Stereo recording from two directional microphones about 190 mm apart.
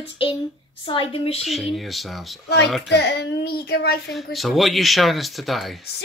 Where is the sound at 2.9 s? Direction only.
60° left (ahead or behind).